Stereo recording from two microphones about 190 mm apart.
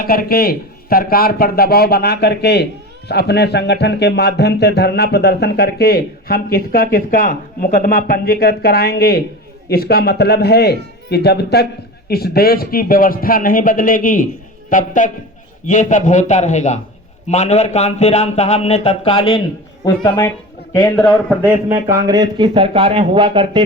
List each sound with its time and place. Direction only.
0.0 s a man's voice: 50° left (ahead or behind); by 20.3 s 20° left (ahead or behind)
21.4 s a man's voice: 15° right (ahead or behind)